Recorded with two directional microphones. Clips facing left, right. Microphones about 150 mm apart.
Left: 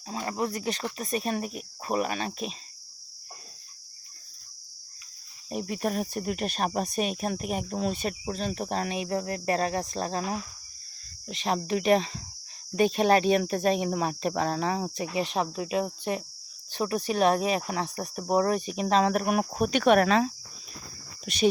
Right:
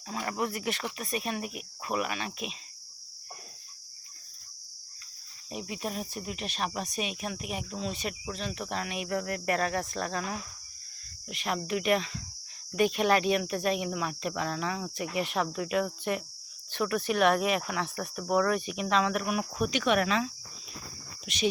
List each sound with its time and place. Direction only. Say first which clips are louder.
0.1 s cricket: left 2 dB; 30° left (ahead or behind)
0.9 s speech: left 4 dB; 40° left (ahead or behind)
5.5 s speech: left 6 dB; 45° left (ahead or behind); by 10.3 s 30° left (ahead or behind)
11.3 s cricket: left 4 dB; 25° left (ahead or behind)
12.7 s speech: left 3 dB; 30° left (ahead or behind)
14.9 s cricket: left 2 dB; 25° left (ahead or behind)
17.1 s speech: left 2 dB; 30° left (ahead or behind)